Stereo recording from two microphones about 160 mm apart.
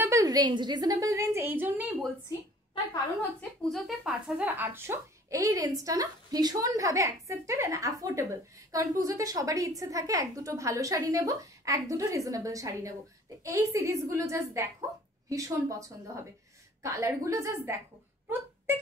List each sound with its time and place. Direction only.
0.0 s a woman's voice: 20° right (ahead or behind)
2.2 s a sound: 30° left (ahead or behind)
3.7 s a woman's voice: centre (ahead or behind); by 17.7 s 15° right (ahead or behind)